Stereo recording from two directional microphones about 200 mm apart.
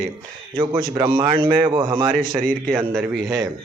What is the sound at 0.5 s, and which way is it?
A man's voice, 25° right (ahead or behind).